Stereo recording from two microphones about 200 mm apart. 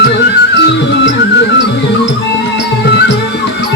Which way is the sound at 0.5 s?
65° left (ahead or behind).